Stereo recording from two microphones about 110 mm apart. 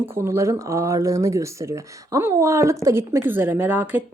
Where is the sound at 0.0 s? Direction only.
25° right (ahead or behind).